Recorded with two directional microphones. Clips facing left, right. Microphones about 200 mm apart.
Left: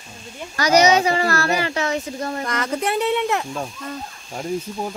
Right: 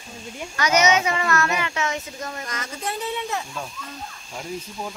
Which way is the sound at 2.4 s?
60° left (ahead or behind).